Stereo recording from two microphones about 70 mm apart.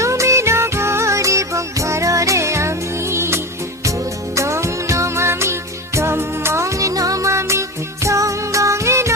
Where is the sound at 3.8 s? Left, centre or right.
Right.